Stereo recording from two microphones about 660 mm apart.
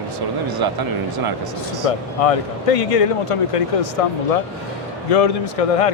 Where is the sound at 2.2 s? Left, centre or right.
Left.